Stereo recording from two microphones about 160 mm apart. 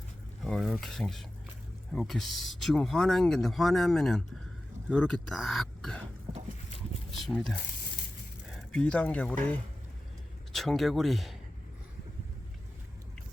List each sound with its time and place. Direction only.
0.4 s speech: centre (ahead or behind)
7.1 s speech: centre (ahead or behind)